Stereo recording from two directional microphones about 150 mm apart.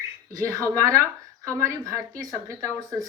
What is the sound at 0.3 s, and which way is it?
A woman's voice, 20° right (ahead or behind).